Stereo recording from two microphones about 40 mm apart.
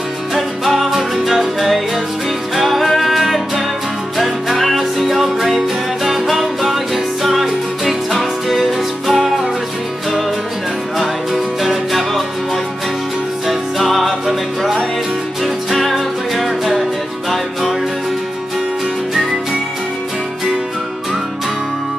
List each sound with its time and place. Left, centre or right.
0.3 s music: centre
11.0 s music: centre
13.5 s music: centre